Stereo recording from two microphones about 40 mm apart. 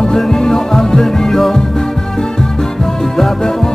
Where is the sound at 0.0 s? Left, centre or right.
Centre.